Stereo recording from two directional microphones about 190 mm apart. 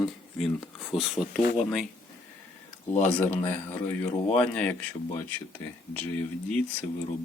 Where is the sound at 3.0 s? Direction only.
10° left (ahead or behind).